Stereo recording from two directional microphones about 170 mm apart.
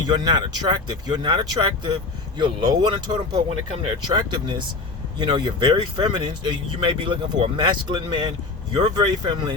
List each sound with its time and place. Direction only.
0.0 s speech: 25° right (ahead or behind)